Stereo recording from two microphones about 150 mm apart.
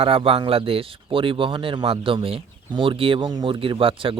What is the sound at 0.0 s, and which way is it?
Speech, 40° right (ahead or behind).